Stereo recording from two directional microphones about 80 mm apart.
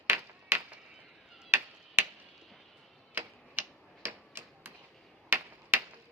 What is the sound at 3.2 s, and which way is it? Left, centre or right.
Tick-tock, right.